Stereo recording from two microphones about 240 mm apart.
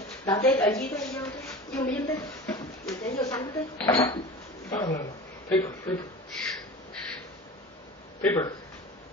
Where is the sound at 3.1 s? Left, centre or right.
Centre.